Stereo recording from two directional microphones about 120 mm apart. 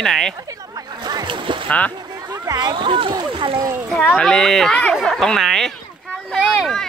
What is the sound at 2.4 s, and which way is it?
Speech, 35° right (ahead or behind).